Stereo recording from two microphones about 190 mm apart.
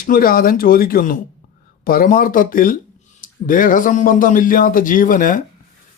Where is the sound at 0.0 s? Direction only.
50° left (ahead or behind).